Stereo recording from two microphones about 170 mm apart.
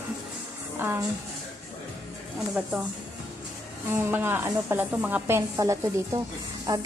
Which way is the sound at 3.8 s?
10° right (ahead or behind).